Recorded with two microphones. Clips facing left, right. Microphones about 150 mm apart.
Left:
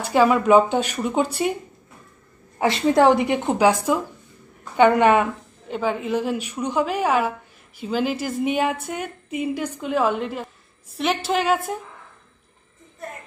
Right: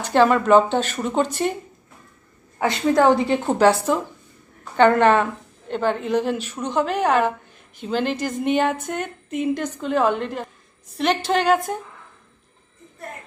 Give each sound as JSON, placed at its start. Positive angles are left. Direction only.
{"t": 0.0, "sound": "a woman's voice", "side_deg": 5}
{"t": 2.6, "sound": "a woman's voice", "side_deg": 25}
{"t": 3.4, "sound": "a woman's voice", "side_deg": 10}